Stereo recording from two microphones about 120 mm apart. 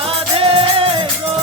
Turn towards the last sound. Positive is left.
turn(degrees=-50)  # may be behind; listen again after turning